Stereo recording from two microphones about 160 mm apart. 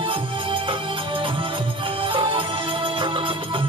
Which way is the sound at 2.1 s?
30° right (ahead or behind).